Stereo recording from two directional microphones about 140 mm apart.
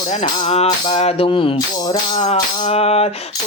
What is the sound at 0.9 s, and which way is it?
Mantra, 50° left (ahead or behind).